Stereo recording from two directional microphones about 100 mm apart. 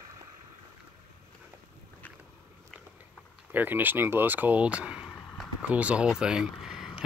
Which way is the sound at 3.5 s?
20° right (ahead or behind).